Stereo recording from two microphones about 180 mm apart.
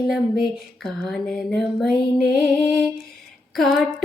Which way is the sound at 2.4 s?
Centre (ahead or behind).